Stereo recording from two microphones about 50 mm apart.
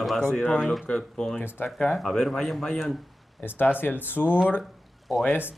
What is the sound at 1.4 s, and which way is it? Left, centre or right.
Speech, left.